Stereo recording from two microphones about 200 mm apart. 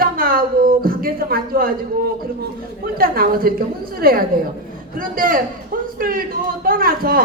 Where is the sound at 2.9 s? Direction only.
45° right (ahead or behind).